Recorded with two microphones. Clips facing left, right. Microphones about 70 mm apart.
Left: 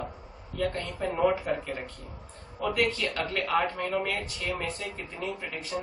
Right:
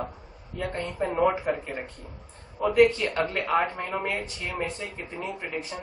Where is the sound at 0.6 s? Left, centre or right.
Right.